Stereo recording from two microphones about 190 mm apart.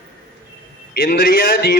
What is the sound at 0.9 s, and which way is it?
Speech, 50° left (ahead or behind).